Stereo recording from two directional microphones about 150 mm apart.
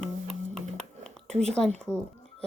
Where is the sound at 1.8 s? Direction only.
10° left (ahead or behind).